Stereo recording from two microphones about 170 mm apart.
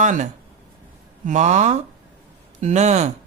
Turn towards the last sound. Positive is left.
turn(degrees=-45)  # may be behind; listen again after turning